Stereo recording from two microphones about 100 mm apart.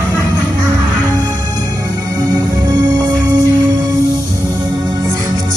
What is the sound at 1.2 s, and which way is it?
Music, 40° right (ahead or behind).